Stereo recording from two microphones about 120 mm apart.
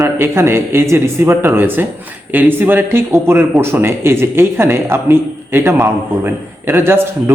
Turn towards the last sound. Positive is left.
turn(degrees=-20)  # may be behind; listen again after turning